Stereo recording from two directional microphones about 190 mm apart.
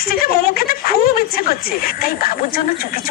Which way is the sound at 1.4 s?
50° left (ahead or behind).